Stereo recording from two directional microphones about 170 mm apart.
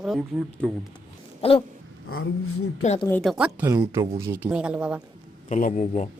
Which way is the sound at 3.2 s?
5° right (ahead or behind).